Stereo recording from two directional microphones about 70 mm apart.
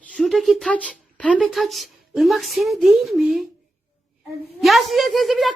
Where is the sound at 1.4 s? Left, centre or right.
Centre.